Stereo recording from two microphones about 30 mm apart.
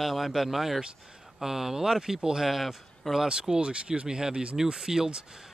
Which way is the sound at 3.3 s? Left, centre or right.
Right.